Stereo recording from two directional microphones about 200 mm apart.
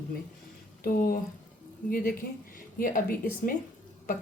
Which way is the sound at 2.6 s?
45° left (ahead or behind).